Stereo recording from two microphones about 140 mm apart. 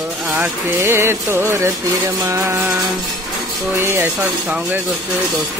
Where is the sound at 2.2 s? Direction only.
20° right (ahead or behind).